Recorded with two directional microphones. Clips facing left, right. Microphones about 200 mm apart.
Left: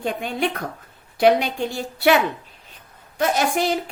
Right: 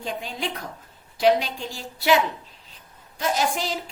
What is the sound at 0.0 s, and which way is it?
A woman's voice, 60° left (ahead or behind).